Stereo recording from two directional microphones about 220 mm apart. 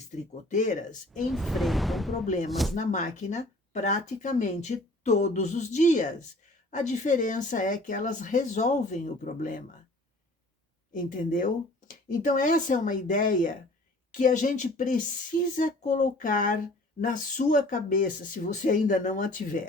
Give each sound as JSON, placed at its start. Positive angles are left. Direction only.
{"t": 0.4, "sound": "speech", "side_deg": 35}
{"t": 1.3, "sound": "speech", "side_deg": 0}
{"t": 2.2, "sound": "speech", "side_deg": 35}
{"t": 2.5, "sound": "speech", "side_deg": 0}
{"t": 2.7, "sound": "speech", "side_deg": 35}
{"t": 10.9, "sound": "speech", "side_deg": 35}